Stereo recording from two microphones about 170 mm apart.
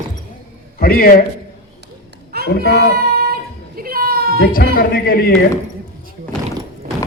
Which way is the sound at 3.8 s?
60° right (ahead or behind).